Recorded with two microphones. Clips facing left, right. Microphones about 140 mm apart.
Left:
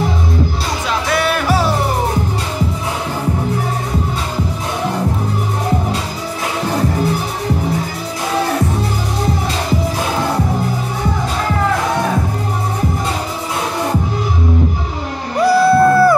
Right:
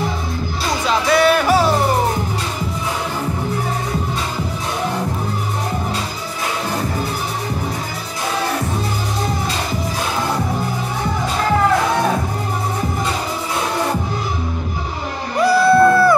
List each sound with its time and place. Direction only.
0.8 s music: centre (ahead or behind)
15.4 s music: 35° left (ahead or behind)